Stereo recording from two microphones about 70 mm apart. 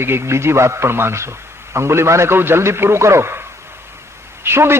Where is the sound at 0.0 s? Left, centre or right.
Right.